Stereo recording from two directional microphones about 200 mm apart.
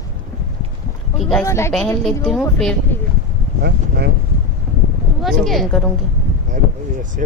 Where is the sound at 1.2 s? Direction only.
Centre (ahead or behind).